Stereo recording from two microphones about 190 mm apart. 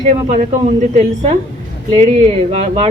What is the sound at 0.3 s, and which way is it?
Speech, 40° right (ahead or behind).